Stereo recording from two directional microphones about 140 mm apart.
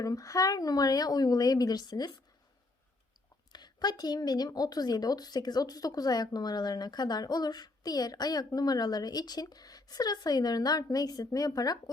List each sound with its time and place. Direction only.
0.0 s a woman's voice: 25° left (ahead or behind)
3.5 s a woman's voice: 30° left (ahead or behind)